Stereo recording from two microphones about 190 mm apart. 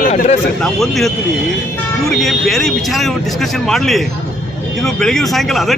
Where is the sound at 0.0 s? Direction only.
35° left (ahead or behind).